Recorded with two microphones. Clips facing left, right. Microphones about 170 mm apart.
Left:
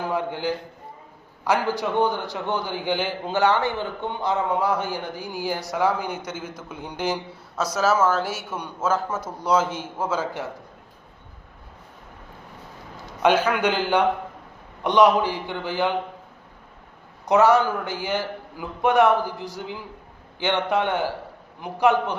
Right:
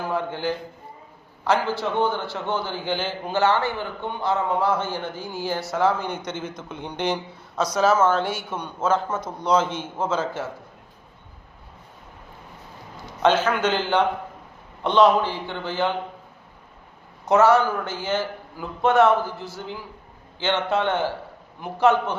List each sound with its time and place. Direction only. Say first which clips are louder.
0.0 s a man's voice: even; 15° left (ahead or behind)
13.2 s speech: even; 10° left (ahead or behind)
17.2 s speech: even; 15° left (ahead or behind)